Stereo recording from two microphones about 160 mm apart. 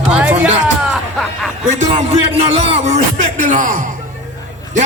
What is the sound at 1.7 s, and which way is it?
Music, 50° right (ahead or behind).